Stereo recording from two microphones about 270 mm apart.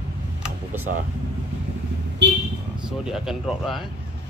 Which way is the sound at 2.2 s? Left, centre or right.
Right.